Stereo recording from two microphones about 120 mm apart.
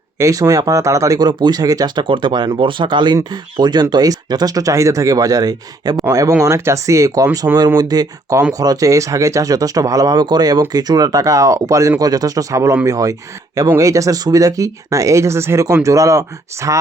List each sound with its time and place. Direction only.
0.2 s speech: 25° right (ahead or behind)